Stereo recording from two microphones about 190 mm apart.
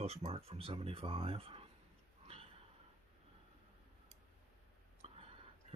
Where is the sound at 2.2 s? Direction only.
30° right (ahead or behind).